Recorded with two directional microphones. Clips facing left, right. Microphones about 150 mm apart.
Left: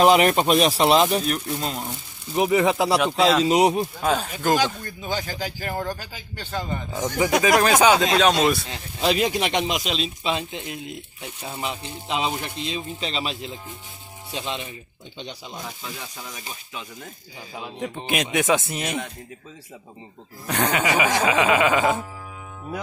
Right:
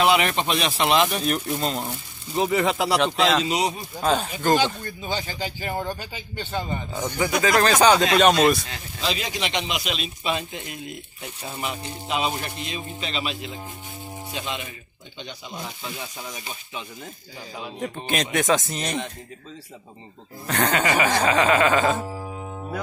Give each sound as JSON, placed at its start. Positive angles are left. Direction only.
{"t": 0.0, "sound": "speech", "side_deg": 40}
{"t": 1.2, "sound": "speech", "side_deg": 0}
{"t": 2.3, "sound": "music", "side_deg": 15}
{"t": 3.4, "sound": "speech", "side_deg": 55}
{"t": 4.0, "sound": "speech", "side_deg": 0}
{"t": 7.4, "sound": "speech", "side_deg": 10}
{"t": 9.0, "sound": "a man's voice", "side_deg": 55}
{"t": 17.7, "sound": "speech", "side_deg": 5}
{"t": 18.0, "sound": "music", "side_deg": 10}
{"t": 20.4, "sound": "music", "side_deg": 10}